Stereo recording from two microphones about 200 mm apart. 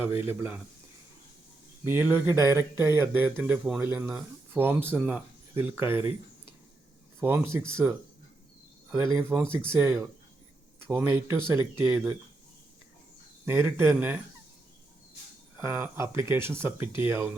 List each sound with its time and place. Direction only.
0.3 s speech: 10° right (ahead or behind)
1.8 s speech: 10° right (ahead or behind)
7.2 s speech: 10° right (ahead or behind)
9.1 s speech: 5° right (ahead or behind)
9.6 s speech: 10° right (ahead or behind)
13.4 s speech: 10° right (ahead or behind)
15.5 s speech: 10° right (ahead or behind)